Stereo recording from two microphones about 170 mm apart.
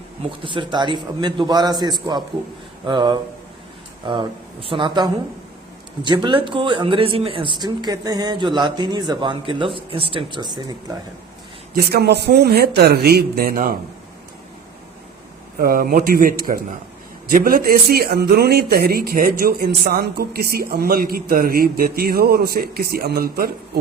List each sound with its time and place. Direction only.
0.4 s speech: 30° right (ahead or behind)
11.7 s speech: 65° right (ahead or behind)
15.5 s speech: 60° right (ahead or behind)